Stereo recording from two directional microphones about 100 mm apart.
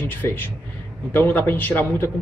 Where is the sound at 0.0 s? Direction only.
20° left (ahead or behind).